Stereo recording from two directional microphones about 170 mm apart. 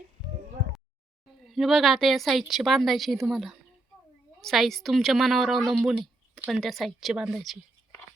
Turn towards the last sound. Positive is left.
turn(degrees=0)  # may be behind; listen again after turning